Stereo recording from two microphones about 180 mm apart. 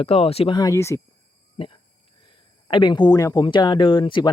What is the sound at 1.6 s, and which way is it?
Speech, 35° left (ahead or behind).